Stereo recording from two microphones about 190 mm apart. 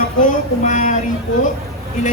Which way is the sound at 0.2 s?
40° left (ahead or behind).